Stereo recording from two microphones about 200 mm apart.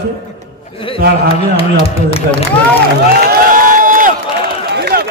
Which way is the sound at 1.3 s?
30° left (ahead or behind).